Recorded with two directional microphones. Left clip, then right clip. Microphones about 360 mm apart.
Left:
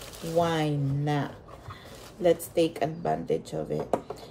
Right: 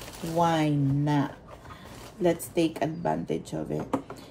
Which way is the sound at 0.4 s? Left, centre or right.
Centre.